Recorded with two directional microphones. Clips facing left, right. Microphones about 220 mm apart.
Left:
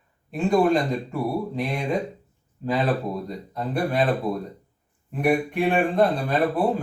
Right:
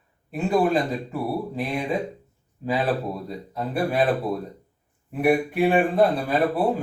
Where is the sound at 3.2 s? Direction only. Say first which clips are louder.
Even; 5° right (ahead or behind).